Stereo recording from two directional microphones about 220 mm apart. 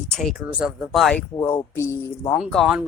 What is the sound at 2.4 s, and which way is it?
Speech, centre (ahead or behind).